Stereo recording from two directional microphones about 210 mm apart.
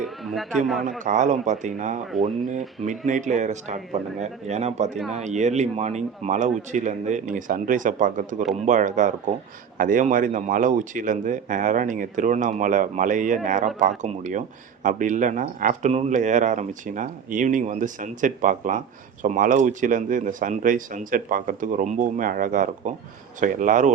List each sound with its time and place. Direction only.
0.0 s speech: centre (ahead or behind)
0.9 s speech: 35° right (ahead or behind)
3.1 s speech: 35° right (ahead or behind)